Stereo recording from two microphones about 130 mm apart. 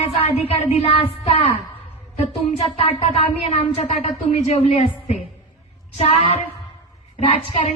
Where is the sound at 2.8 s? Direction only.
45° left (ahead or behind).